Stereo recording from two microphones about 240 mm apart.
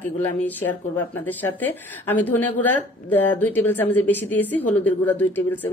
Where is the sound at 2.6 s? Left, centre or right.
Centre.